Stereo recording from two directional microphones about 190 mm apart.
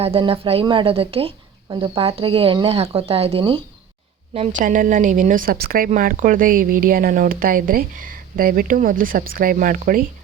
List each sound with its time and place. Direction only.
0.0 s speech: 30° right (ahead or behind)
4.4 s a woman's voice: 45° right (ahead or behind)